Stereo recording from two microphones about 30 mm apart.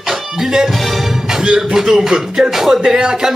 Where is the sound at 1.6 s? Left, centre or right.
Centre.